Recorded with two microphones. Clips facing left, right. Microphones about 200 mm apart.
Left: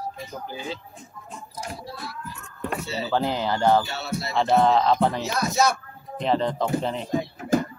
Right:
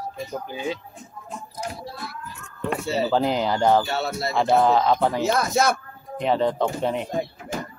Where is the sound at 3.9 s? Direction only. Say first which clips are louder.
Right 4 dB; 50° right (ahead or behind).